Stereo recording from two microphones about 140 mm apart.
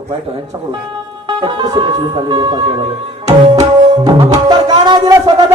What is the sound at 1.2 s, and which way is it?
A man's voice, 35° right (ahead or behind).